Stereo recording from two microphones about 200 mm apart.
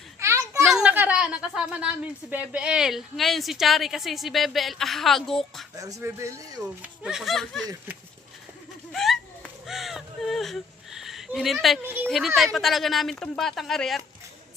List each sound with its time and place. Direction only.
0.2 s a sound: 15° right (ahead or behind)
0.6 s a sound: 5° right (ahead or behind)
2.3 s a woman's voice: 5° right (ahead or behind)
5.7 s speech: 15° right (ahead or behind)
6.6 s a woman's voice: 5° right (ahead or behind)
8.9 s crow: centre (ahead or behind)
12.5 s a woman's voice: centre (ahead or behind)